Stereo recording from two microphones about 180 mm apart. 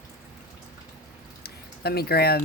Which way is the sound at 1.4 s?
60° left (ahead or behind).